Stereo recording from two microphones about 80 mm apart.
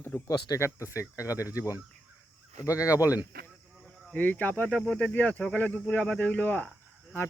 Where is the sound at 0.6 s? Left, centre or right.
Left.